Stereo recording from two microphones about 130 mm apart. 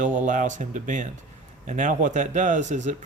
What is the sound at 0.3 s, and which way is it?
Speech, 75° right (ahead or behind).